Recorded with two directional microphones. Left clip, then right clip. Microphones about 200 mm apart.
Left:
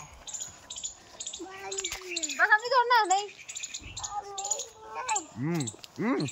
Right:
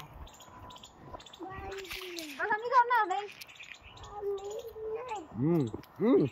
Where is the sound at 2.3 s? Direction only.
55° left (ahead or behind).